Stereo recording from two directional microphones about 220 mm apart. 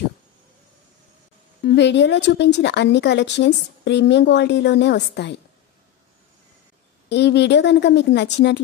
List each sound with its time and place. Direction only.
1.6 s speech: 50° left (ahead or behind)
7.1 s speech: 50° left (ahead or behind)